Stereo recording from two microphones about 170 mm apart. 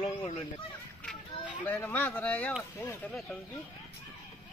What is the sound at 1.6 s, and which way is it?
Speech, 10° left (ahead or behind).